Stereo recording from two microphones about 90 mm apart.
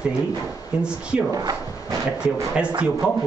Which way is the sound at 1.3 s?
45° right (ahead or behind).